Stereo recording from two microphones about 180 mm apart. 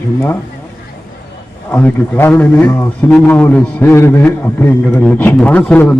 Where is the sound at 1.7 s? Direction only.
10° left (ahead or behind).